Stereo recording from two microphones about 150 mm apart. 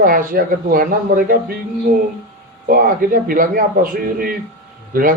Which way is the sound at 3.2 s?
70° right (ahead or behind).